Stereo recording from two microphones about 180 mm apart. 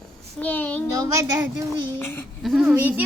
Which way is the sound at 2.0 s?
10° left (ahead or behind).